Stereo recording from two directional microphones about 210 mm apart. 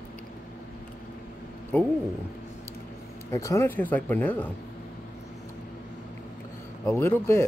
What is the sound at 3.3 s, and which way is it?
Speech, 15° left (ahead or behind).